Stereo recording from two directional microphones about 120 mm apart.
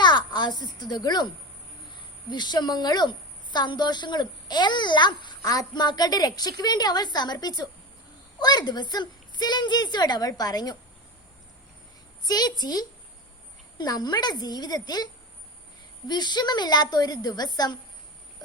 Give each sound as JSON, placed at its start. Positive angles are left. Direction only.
{"t": 0.0, "sound": "speech", "side_deg": 40}
{"t": 2.3, "sound": "a woman's voice", "side_deg": 40}
{"t": 12.2, "sound": "a woman's voice", "side_deg": 35}